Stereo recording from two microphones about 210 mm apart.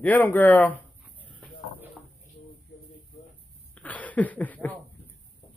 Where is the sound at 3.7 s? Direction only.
5° left (ahead or behind).